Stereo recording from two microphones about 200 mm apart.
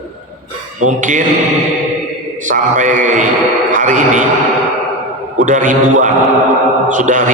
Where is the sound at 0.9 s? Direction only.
40° right (ahead or behind).